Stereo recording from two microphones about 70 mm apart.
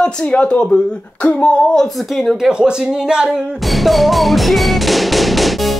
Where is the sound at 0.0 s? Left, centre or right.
Centre.